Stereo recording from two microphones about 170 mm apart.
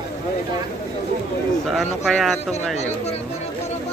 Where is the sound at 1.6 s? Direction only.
Centre (ahead or behind).